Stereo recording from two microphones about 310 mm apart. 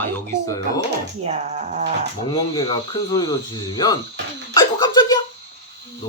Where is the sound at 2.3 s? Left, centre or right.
Centre.